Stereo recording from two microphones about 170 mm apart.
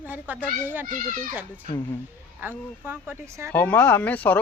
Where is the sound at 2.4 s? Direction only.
10° right (ahead or behind).